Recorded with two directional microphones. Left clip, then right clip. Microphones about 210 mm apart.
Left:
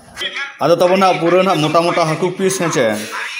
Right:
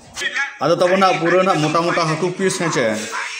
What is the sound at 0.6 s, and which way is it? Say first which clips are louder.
Speech: left 3 dB; 15° left (ahead or behind).